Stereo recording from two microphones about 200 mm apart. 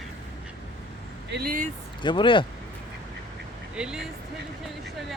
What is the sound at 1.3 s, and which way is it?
Speech, 45° right (ahead or behind).